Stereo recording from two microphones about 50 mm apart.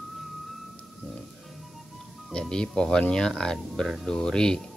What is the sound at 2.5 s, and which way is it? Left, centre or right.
Speech, centre.